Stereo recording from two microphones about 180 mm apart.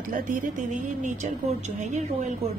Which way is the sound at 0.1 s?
45° right (ahead or behind).